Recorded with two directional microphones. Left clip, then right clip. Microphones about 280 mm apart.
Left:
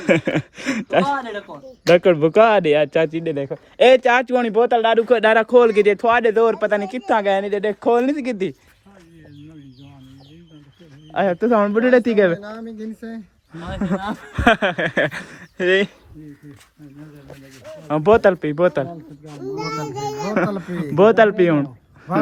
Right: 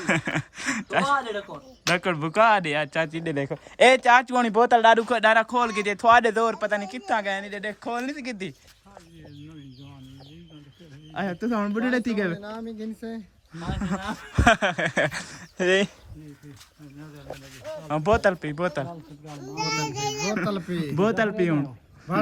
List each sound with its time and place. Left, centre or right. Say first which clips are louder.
0.0 s speech: left 7 dB; centre
11.1 s speech: left 12 dB; centre
12.4 s speech: left 3 dB; left
13.5 s speech: left 6 dB; centre
17.8 s speech: left 8 dB; centre